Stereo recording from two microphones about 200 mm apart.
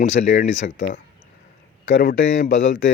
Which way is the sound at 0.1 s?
40° left (ahead or behind).